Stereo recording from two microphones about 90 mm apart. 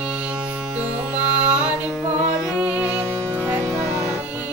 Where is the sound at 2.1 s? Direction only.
15° right (ahead or behind).